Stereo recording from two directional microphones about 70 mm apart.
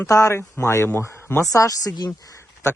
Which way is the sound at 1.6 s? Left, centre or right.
Left.